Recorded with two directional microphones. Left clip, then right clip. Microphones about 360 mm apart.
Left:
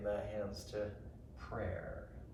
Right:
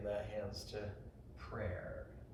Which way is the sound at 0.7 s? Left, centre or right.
Centre.